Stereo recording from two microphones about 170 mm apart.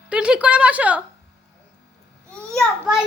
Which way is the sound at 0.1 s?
5° right (ahead or behind).